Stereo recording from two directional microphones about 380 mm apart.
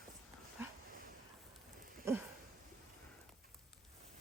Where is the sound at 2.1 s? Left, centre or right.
Centre.